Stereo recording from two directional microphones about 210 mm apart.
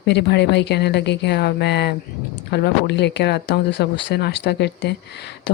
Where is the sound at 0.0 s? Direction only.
55° left (ahead or behind).